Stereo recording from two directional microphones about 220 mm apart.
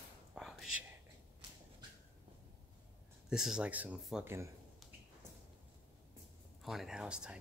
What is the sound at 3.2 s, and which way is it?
Speech, 5° right (ahead or behind).